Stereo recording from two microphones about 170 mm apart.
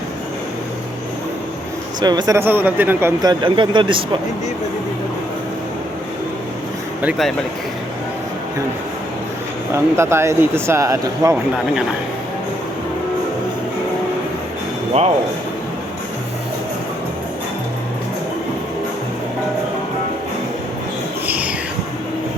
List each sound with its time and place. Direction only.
2.0 s speech: 25° right (ahead or behind)
7.0 s speech: 5° right (ahead or behind)
9.7 s speech: 15° right (ahead or behind)
21.2 s a sound: 10° right (ahead or behind)